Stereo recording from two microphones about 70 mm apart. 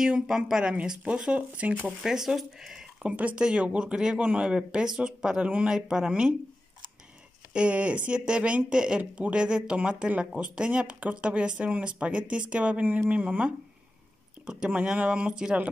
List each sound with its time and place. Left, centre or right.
0.0 s speech: centre
2.0 s speech: centre
3.0 s speech: centre
7.5 s speech: centre